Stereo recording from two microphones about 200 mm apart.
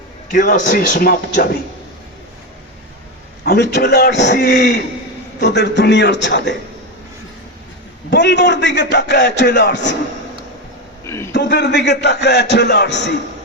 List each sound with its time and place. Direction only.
0.3 s speech: 40° left (ahead or behind)
3.4 s a man's voice: 55° left (ahead or behind)
8.1 s a man's voice: 60° left (ahead or behind)
11.0 s a sound: 15° left (ahead or behind)
11.3 s a man's voice: 60° left (ahead or behind)